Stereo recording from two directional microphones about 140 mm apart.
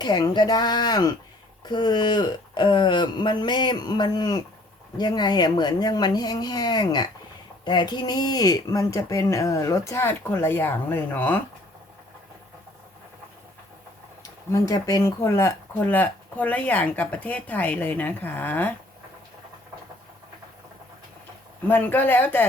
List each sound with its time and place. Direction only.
0.0 s speech: 30° left (ahead or behind); by 11.3 s 10° left (ahead or behind)
14.5 s speech: 25° left (ahead or behind)
21.7 s speech: 15° left (ahead or behind)